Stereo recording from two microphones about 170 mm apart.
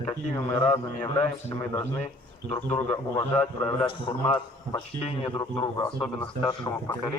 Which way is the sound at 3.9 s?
30° left (ahead or behind).